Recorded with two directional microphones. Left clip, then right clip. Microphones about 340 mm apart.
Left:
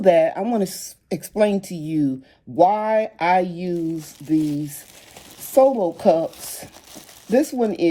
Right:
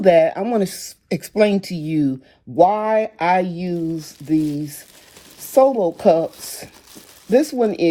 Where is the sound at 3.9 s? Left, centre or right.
Right.